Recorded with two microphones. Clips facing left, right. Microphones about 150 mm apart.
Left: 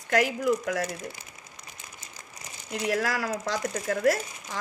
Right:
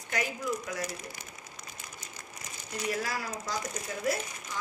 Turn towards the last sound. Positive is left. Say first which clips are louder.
# left 4 dB
turn(degrees=80)